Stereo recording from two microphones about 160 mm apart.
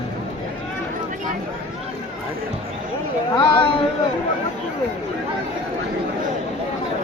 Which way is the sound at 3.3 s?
30° left (ahead or behind).